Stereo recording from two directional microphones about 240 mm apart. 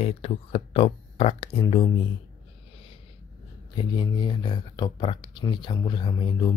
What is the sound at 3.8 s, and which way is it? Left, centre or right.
Speech, centre.